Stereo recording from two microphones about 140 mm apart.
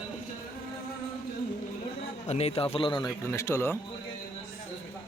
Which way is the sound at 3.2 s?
20° left (ahead or behind).